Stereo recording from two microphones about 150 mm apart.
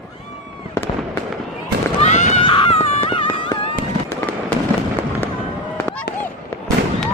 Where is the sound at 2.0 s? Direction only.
50° left (ahead or behind).